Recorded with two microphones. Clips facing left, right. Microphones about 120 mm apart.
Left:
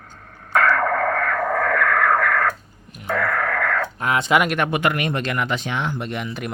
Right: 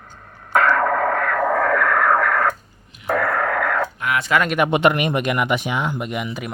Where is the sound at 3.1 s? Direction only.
30° right (ahead or behind).